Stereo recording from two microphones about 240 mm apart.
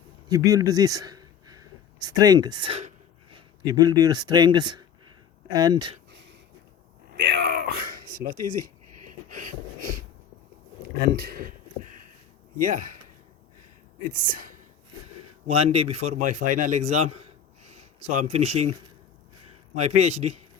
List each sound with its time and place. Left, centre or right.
0.3 s speech: centre
6.1 s a sound: right
11.0 s speech: right
14.1 s a man's voice: right
17.2 s a sound: right
18.3 s a man's voice: right
18.5 s speech: right
19.8 s a man's voice: right